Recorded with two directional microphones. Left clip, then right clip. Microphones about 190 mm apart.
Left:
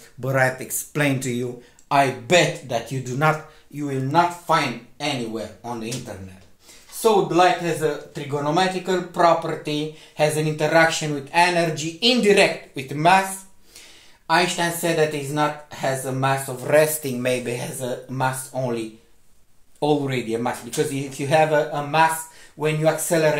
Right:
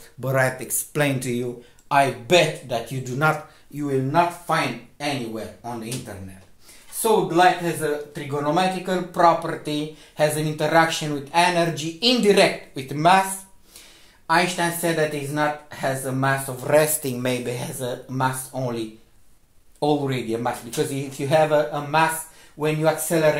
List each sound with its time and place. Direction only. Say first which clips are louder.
0.2 s speech: left 1 dB; 5° right (ahead or behind)
7.0 s speech: left 1 dB; 10° right (ahead or behind)